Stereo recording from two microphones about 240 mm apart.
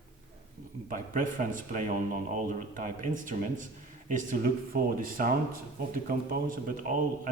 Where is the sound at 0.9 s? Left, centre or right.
Right.